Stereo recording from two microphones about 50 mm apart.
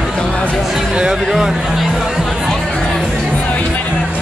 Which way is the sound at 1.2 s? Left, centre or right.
Centre.